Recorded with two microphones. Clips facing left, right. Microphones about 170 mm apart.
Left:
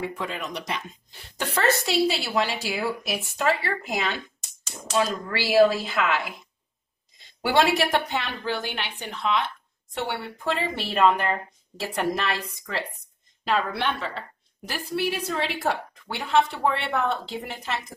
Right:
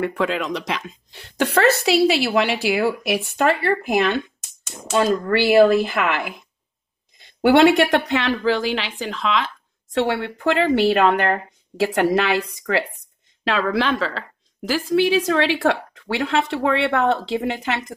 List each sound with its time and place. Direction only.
0.0 s speech: 80° right; by 4.2 s 60° right (ahead or behind)
4.4 s a sound: centre (ahead or behind)
4.9 s speech: 60° right (ahead or behind)
7.2 s a sound: 65° right (ahead or behind)
7.6 s speech: centre (ahead or behind)
8.1 s a woman's voice: 90° right; by 12.4 s 70° right (ahead or behind)
13.4 s a woman's voice: 90° right
17.6 s speech: 75° right (ahead or behind)